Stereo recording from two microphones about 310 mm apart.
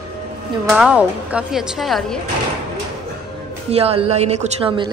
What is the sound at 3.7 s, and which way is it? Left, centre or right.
Speech, centre.